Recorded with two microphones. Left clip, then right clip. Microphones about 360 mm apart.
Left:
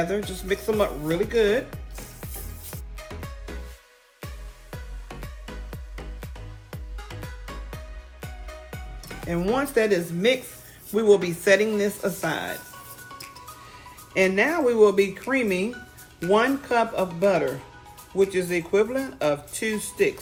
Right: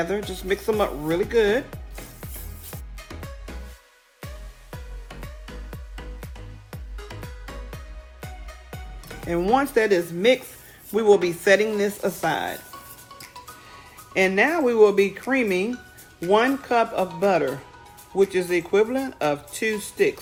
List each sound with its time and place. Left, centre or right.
0.3 s speech: right
2.2 s music: centre
4.7 s music: centre
8.2 s music: centre
9.2 s speech: right
14.1 s speech: right